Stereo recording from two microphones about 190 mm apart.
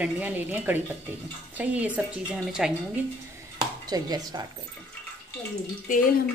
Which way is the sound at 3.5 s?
20° right (ahead or behind).